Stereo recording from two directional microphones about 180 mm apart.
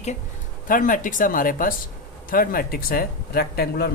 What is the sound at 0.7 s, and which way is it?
Speech, 45° left (ahead or behind).